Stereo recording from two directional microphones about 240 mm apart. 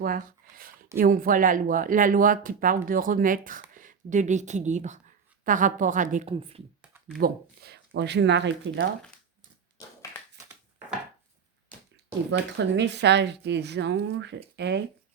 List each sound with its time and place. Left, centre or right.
0.0 s a sound: right
0.9 s speech: right
7.2 s speech: right
12.3 s speech: right